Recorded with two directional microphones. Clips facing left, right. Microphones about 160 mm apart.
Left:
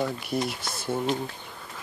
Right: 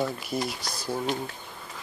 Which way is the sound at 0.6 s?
35° right (ahead or behind).